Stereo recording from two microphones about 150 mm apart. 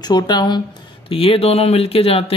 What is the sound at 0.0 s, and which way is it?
Speech, 30° left (ahead or behind).